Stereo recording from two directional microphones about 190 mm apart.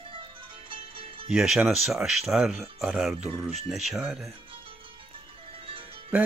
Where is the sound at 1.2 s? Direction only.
5° right (ahead or behind).